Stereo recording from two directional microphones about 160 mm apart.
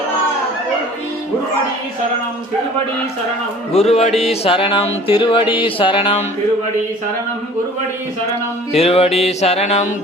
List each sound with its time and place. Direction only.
3.7 s music: 40° left (ahead or behind)
8.7 s music: 40° left (ahead or behind)